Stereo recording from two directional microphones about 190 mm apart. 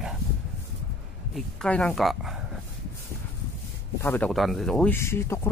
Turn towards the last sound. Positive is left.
turn(degrees=15)  # may be behind; listen again after turning